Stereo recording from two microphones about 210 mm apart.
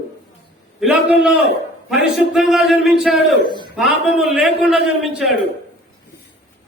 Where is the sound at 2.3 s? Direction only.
Centre (ahead or behind).